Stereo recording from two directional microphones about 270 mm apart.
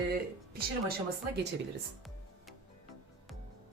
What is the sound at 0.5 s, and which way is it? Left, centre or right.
Speech, right.